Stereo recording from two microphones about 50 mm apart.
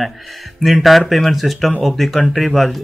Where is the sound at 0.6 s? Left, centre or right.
Centre.